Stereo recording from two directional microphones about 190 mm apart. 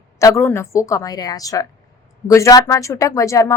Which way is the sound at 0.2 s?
15° left (ahead or behind).